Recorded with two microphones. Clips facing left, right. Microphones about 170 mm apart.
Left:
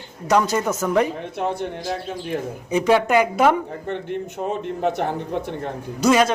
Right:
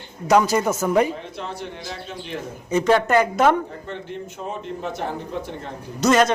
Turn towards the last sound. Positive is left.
turn(degrees=10)  # may be behind; listen again after turning